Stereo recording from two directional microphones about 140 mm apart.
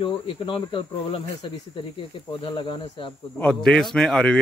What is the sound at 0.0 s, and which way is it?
A man's voice, 35° left (ahead or behind).